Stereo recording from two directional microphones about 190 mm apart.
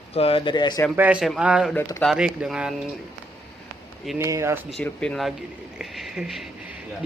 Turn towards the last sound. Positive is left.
turn(degrees=0)  # may be behind; listen again after turning